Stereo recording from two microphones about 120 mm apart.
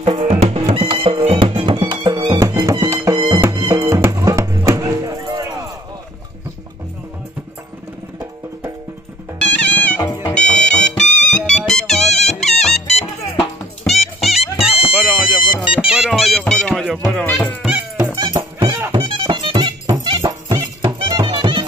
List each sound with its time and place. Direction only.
0.0 s music: 60° right (ahead or behind)
1.5 s music: 40° right (ahead or behind)
9.4 s music: 15° left (ahead or behind)
14.4 s music: 55° left (ahead or behind)
15.5 s music: 10° right (ahead or behind)
17.9 s music: 35° right (ahead or behind)